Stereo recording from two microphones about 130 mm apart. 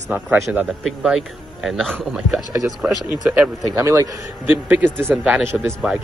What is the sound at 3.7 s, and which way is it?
A man's voice, 20° right (ahead or behind).